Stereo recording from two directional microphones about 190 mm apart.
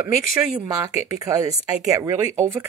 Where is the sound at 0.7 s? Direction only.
20° right (ahead or behind).